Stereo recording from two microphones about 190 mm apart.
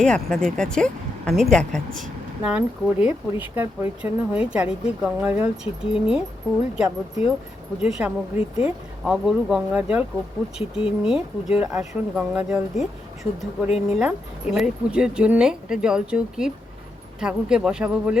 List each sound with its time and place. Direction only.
0.0 s speech: 5° left (ahead or behind)
10.6 s speech: 30° left (ahead or behind)
11.0 s speech: 5° right (ahead or behind)